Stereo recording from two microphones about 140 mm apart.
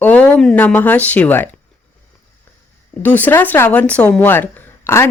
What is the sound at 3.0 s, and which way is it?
Speech, 15° left (ahead or behind).